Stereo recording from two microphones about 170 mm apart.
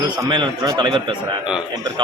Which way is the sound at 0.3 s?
25° right (ahead or behind).